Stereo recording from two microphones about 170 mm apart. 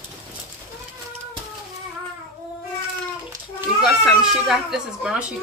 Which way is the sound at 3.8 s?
Centre (ahead or behind).